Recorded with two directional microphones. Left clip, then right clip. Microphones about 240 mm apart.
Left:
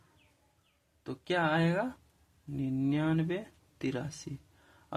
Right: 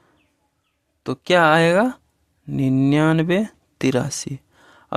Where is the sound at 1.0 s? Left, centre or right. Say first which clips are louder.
Right 16 dB; right.